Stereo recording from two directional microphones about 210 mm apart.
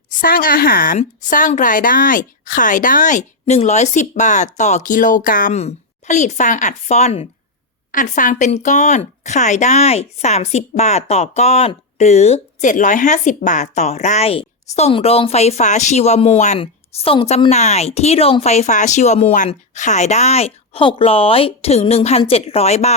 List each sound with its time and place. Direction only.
0.1 s speech: 40° left (ahead or behind)